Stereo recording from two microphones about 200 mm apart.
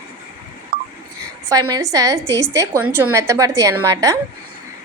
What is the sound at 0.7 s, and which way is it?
Telephone dialing, 50° right (ahead or behind).